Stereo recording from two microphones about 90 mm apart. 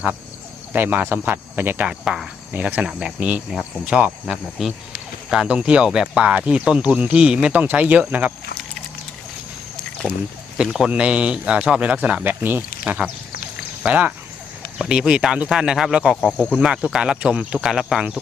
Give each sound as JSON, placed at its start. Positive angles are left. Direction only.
{"t": 0.7, "sound": "speech", "side_deg": -20}
{"t": 1.9, "sound": "a man's voice", "side_deg": -10}
{"t": 4.6, "sound": "a man's voice", "side_deg": 0}
{"t": 10.6, "sound": "a man's voice", "side_deg": -10}